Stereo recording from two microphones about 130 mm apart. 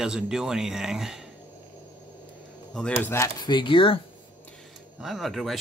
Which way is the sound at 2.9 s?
20° left (ahead or behind).